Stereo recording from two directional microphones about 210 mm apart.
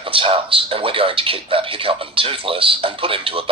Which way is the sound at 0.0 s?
25° right (ahead or behind).